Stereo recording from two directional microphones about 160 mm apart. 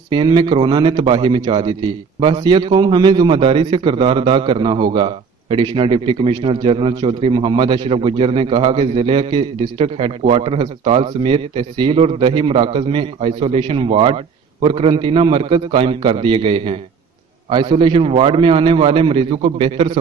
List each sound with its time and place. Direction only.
0.1 s a man's voice: 30° right (ahead or behind)